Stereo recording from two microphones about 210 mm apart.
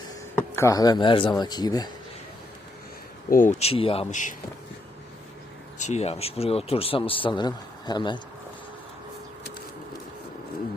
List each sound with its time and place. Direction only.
0.3 s a man's voice: 10° left (ahead or behind)
3.2 s speech: 40° left (ahead or behind)
5.8 s a man's voice: 30° left (ahead or behind)